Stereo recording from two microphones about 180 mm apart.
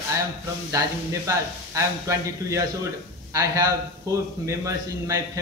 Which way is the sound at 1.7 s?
15° right (ahead or behind).